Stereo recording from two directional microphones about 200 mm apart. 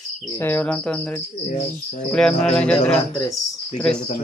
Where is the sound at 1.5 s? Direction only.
35° left (ahead or behind).